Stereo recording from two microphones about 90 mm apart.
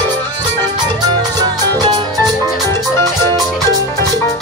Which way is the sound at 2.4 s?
30° left (ahead or behind).